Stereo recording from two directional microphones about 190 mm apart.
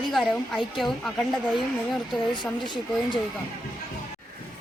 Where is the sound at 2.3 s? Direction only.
25° left (ahead or behind).